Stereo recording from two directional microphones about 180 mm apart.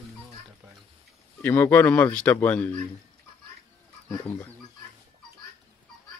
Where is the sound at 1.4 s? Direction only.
10° left (ahead or behind).